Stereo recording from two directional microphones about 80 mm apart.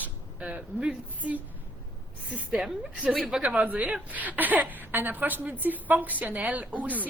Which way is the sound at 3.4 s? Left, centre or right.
Centre.